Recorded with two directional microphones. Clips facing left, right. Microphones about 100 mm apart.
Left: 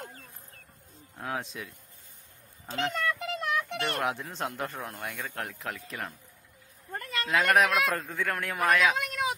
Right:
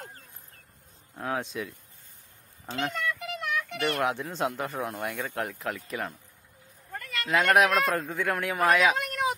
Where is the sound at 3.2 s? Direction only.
35° left (ahead or behind).